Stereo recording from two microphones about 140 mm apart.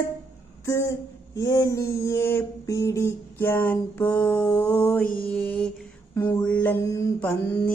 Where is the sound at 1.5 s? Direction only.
20° left (ahead or behind).